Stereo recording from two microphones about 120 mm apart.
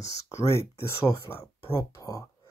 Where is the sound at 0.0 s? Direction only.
25° left (ahead or behind).